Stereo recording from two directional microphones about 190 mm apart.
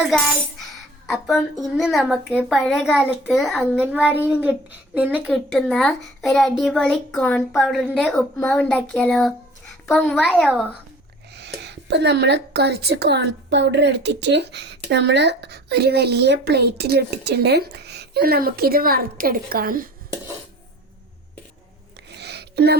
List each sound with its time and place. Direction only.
0.6 s a child's voice: centre (ahead or behind)
11.3 s a woman's voice: 65° right (ahead or behind); by 19.9 s 50° right (ahead or behind)
22.1 s a sound: 60° right (ahead or behind)